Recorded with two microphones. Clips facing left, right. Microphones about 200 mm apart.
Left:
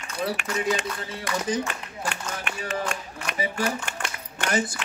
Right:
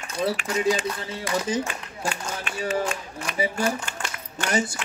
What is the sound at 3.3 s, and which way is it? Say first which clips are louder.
Speech: right 2 dB; 65° left (ahead or behind).